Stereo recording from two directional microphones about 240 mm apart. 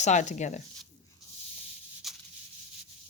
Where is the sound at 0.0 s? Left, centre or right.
Left.